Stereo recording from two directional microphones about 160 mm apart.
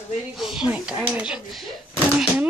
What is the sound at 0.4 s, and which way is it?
Speech, 5° right (ahead or behind).